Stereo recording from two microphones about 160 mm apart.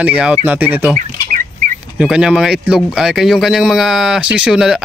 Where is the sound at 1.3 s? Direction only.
55° right (ahead or behind).